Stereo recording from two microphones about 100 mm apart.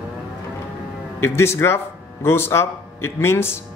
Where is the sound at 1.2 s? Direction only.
25° left (ahead or behind).